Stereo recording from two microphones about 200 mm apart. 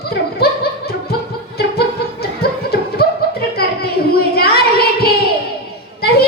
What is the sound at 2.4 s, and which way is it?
Music, 50° left (ahead or behind).